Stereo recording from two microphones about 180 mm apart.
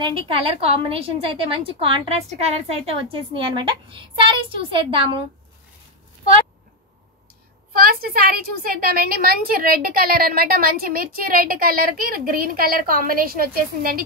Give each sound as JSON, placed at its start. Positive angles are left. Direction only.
{"t": 0.0, "sound": "a woman's voice", "side_deg": -30}
{"t": 7.7, "sound": "a woman's voice", "side_deg": -55}